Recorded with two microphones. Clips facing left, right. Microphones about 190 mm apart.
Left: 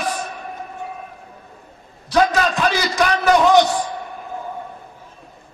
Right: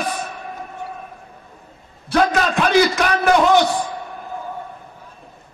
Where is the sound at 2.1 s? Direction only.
55° right (ahead or behind).